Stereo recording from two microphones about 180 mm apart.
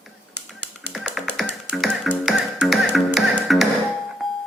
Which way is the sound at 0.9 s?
Centre (ahead or behind).